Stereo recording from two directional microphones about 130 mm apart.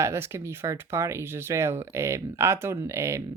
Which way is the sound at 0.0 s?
20° right (ahead or behind).